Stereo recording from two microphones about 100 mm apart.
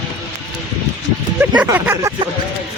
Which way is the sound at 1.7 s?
25° right (ahead or behind).